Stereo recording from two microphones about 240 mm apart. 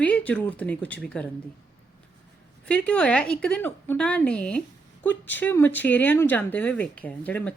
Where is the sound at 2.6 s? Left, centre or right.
Centre.